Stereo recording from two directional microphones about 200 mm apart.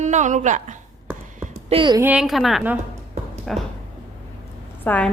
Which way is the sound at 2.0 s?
5° right (ahead or behind).